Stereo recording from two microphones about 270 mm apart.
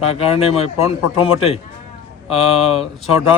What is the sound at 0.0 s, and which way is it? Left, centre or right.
Speech, left.